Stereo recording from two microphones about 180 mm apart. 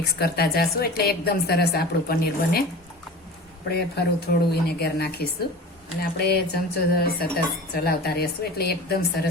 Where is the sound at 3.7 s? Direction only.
65° left (ahead or behind).